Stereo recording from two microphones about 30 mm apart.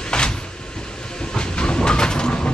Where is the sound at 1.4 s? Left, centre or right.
Left.